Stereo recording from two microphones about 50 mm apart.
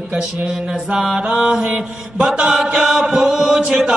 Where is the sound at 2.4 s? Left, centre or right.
Centre.